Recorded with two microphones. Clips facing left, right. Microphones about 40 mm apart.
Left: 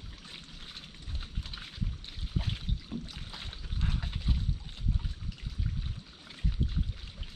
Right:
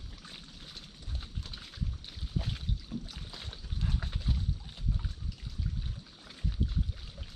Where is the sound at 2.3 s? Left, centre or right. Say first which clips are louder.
Left 1 dB; left.